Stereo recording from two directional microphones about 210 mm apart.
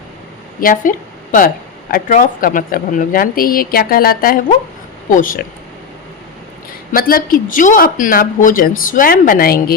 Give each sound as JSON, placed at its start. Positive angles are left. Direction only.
{"t": 0.6, "sound": "speech", "side_deg": 40}
{"t": 6.9, "sound": "speech", "side_deg": 45}